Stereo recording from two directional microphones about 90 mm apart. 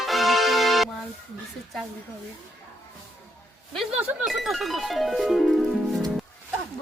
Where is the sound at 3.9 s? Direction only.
10° right (ahead or behind).